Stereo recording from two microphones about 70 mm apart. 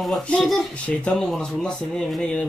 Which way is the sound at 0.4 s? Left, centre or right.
Centre.